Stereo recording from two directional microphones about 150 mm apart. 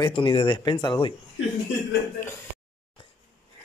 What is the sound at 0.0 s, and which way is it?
Speech, 35° left (ahead or behind).